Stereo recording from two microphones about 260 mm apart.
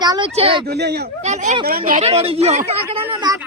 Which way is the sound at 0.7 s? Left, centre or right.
Right.